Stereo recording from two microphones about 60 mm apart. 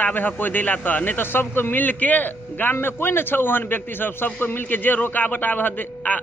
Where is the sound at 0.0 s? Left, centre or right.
Left.